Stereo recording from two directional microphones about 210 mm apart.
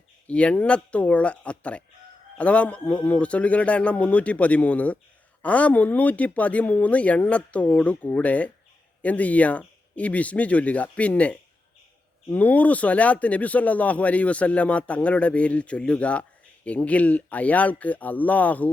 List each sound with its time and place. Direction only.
0.3 s a man's voice: 5° left (ahead or behind)